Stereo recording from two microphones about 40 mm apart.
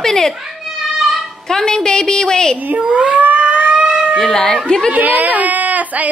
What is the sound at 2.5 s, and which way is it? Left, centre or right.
Cat, right.